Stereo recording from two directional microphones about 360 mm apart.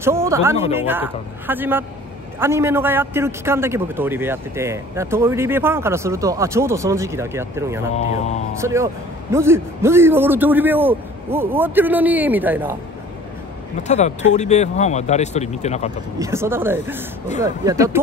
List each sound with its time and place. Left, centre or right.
0.0 s a man's voice: centre
13.8 s speech: centre
16.2 s a man's voice: centre